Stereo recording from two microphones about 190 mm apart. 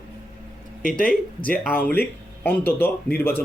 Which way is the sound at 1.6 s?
10° left (ahead or behind).